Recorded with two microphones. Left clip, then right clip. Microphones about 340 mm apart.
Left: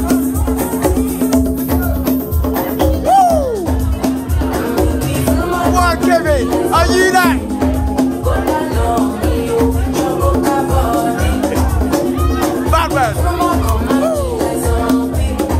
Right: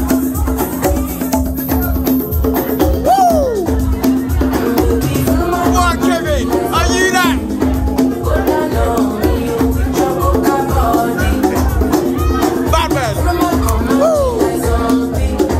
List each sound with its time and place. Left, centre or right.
3.1 s music: centre
5.7 s music: centre
12.7 s music: centre